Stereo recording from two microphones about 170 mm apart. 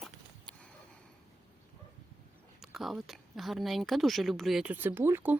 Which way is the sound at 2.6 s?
Centre (ahead or behind).